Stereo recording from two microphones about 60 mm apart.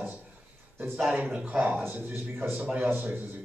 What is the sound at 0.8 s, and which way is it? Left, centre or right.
Speech, centre.